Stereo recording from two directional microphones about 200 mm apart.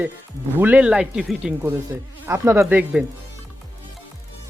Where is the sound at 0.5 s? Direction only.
10° right (ahead or behind).